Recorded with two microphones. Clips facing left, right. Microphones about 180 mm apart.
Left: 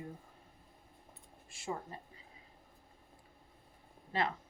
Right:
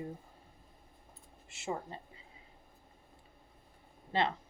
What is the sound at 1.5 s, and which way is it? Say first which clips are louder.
Speech: right 2 dB; 25° right (ahead or behind).